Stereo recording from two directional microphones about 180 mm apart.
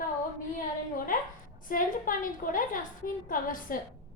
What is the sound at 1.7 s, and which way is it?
A woman's voice, 50° left (ahead or behind).